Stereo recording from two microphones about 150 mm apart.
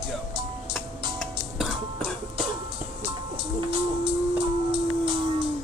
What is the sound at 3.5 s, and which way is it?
Music, 35° right (ahead or behind).